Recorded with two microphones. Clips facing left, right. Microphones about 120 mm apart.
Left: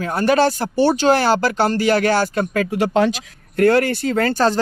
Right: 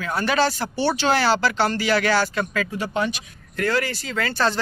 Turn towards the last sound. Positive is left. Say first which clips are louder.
# left 6 dB
turn(degrees=45)  # may be behind; listen again after turning